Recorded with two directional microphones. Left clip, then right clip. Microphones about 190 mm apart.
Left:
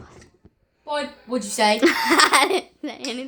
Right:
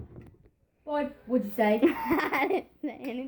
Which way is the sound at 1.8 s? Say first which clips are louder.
Left 10 dB; 20° left (ahead or behind).